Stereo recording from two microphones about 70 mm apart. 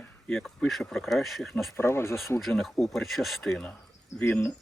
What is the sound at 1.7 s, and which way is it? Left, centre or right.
Speech, left.